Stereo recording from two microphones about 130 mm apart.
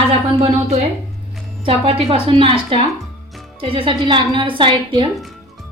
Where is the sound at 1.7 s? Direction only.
45° right (ahead or behind).